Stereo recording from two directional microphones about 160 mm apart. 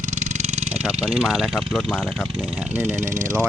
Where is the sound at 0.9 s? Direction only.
5° right (ahead or behind).